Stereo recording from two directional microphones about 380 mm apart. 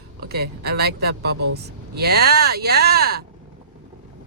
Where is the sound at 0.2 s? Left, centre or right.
Right.